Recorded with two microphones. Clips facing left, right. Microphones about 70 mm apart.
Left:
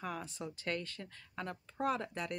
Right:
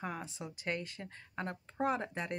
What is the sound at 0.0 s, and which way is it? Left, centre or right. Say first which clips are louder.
Speech: even; right.